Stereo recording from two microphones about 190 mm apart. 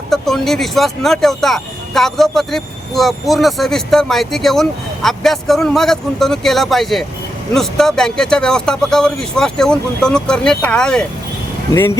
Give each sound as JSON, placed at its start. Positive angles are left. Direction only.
{"t": 0.1, "sound": "speech", "side_deg": 0}